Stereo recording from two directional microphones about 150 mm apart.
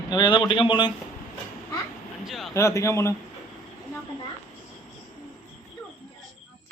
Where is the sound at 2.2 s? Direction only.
Centre (ahead or behind).